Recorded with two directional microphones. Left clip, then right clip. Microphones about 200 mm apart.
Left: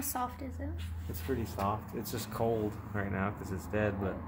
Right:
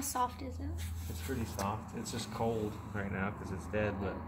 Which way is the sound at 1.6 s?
60° left (ahead or behind).